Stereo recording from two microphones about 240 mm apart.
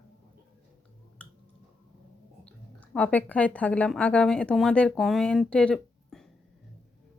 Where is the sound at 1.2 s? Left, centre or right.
Centre.